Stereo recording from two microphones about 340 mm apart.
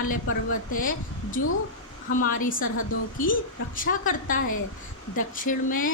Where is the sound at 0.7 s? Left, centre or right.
Left.